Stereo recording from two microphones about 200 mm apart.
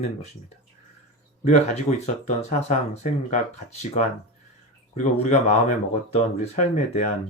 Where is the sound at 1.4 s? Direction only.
35° left (ahead or behind).